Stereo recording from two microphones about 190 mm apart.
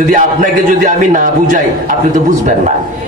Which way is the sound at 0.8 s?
45° right (ahead or behind).